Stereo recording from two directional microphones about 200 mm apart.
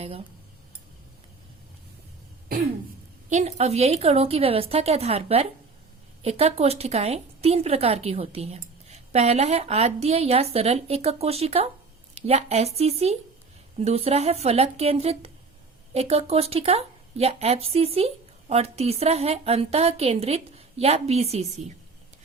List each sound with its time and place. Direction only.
3.2 s speech: 35° right (ahead or behind)